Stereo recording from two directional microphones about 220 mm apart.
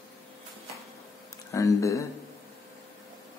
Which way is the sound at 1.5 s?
15° left (ahead or behind).